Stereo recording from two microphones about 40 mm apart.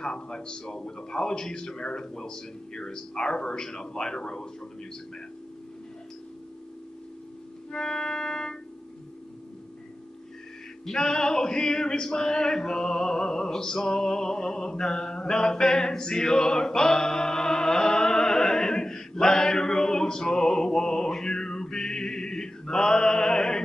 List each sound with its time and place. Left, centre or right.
0.0 s a man's voice: left
7.7 s organ: centre
10.9 s a sound: centre